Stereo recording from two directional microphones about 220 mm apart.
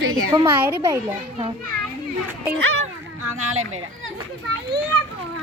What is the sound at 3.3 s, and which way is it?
Speech, 70° right (ahead or behind).